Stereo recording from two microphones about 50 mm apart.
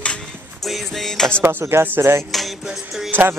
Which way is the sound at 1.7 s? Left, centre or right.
Right.